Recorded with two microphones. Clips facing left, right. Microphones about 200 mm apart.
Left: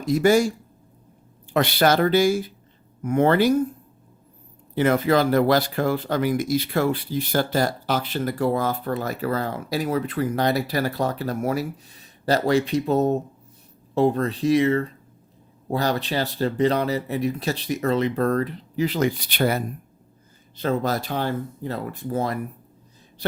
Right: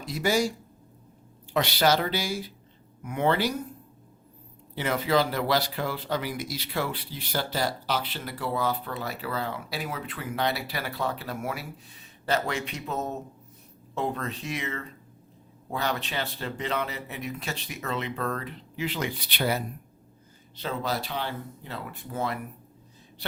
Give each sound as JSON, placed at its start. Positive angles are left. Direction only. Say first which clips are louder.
{"t": 0.0, "sound": "speech", "louder": "left 8 dB", "side_deg": 50}
{"t": 1.5, "sound": "speech", "louder": "left 5 dB", "side_deg": 55}
{"t": 4.7, "sound": "speech", "louder": "left 6 dB", "side_deg": 50}